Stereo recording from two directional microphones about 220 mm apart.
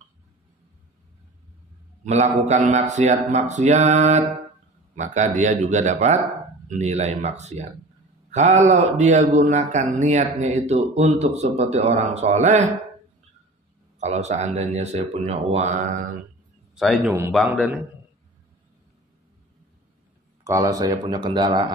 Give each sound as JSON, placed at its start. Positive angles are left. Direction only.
{"t": 2.0, "sound": "a man's voice", "side_deg": -30}
{"t": 13.9, "sound": "a man's voice", "side_deg": -30}
{"t": 16.7, "sound": "a man's voice", "side_deg": 0}
{"t": 20.4, "sound": "speech", "side_deg": -15}